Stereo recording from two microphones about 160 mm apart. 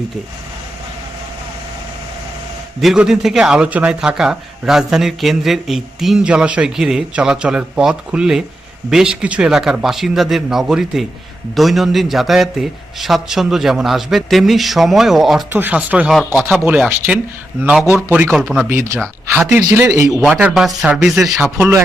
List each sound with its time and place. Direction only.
2.8 s a man's voice: 5° right (ahead or behind)
18.7 s speech: 20° right (ahead or behind)
20.1 s a man's voice: centre (ahead or behind)